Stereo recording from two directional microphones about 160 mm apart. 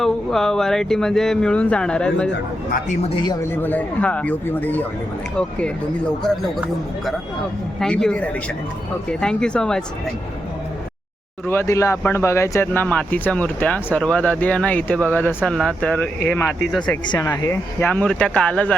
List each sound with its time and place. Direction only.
0.0 s speech: centre (ahead or behind)
2.9 s speech: 40° left (ahead or behind)
3.2 s speech: 15° left (ahead or behind)
11.4 s speech: 15° left (ahead or behind)
17.1 s speech: 20° left (ahead or behind)